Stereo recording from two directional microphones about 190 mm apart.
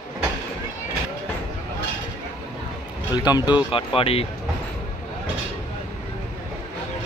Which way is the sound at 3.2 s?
20° left (ahead or behind).